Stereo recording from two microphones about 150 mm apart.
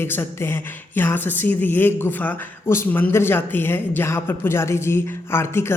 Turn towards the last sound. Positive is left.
turn(degrees=15)  # may be behind; listen again after turning